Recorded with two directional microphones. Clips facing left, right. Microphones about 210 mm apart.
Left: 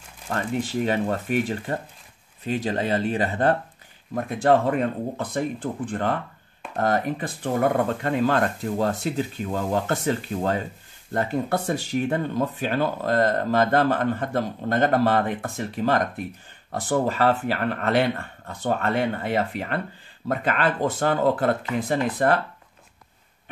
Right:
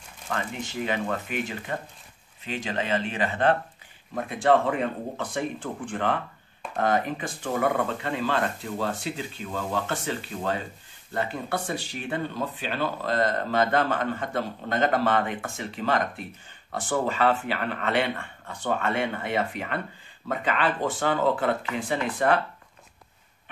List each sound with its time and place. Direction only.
0.3 s speech: 40° left (ahead or behind)